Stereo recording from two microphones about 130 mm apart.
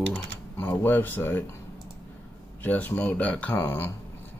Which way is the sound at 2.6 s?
15° left (ahead or behind).